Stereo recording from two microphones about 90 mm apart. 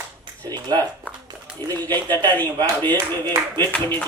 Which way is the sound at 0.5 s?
50° right (ahead or behind).